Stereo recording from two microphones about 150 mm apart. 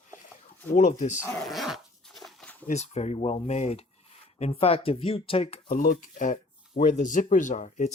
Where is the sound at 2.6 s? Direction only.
50° left (ahead or behind).